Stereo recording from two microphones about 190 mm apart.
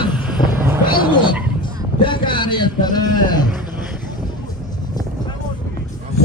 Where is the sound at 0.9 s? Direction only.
25° left (ahead or behind).